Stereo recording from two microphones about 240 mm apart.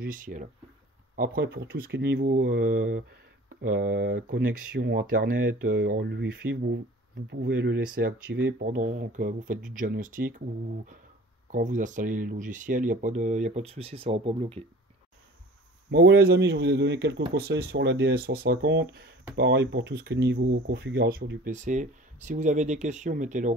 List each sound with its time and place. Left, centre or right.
0.0 s speech: right
2.2 s speech: right
8.5 s speech: right
11.5 s speech: right
15.9 s speech: right